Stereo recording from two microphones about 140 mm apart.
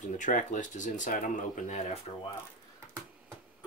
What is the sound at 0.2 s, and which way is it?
Speech, 65° left (ahead or behind).